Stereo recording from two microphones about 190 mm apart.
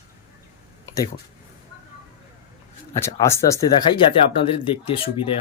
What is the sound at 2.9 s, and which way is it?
Speech, 15° left (ahead or behind).